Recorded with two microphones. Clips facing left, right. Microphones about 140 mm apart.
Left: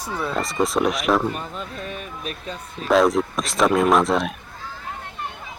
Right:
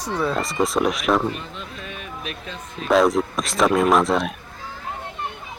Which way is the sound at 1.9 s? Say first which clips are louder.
Left 1 dB; 40° left (ahead or behind).